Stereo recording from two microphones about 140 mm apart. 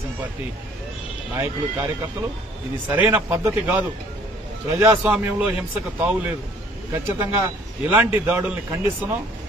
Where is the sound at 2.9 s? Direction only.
15° right (ahead or behind).